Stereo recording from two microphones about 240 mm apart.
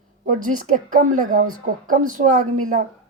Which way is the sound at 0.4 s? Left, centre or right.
Right.